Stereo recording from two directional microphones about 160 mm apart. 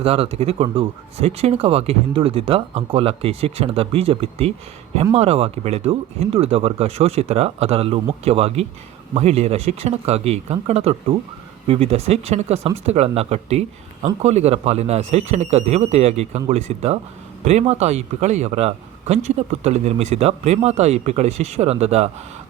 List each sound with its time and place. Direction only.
0.0 s speech: 40° right (ahead or behind)